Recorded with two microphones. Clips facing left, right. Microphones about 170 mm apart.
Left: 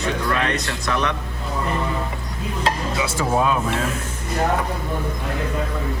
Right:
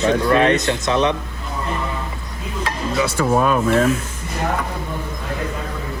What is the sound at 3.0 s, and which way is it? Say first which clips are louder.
Speech: right 5 dB; 60° right (ahead or behind).